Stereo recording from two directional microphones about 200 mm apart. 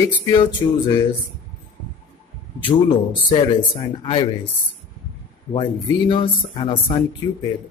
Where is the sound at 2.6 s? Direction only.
25° left (ahead or behind).